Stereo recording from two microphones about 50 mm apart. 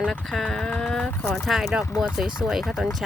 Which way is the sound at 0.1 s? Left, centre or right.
Centre.